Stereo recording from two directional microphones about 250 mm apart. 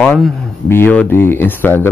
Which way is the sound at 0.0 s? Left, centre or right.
Centre.